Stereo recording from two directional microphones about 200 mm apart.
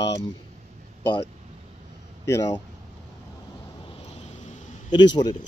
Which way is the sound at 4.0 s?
35° left (ahead or behind).